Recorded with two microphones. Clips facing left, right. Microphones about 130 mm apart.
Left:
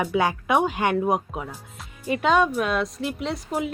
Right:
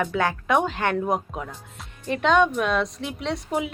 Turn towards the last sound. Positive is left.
turn(degrees=0)  # may be behind; listen again after turning